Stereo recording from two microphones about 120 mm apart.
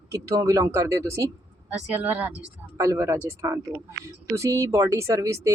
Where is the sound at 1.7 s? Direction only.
15° right (ahead or behind).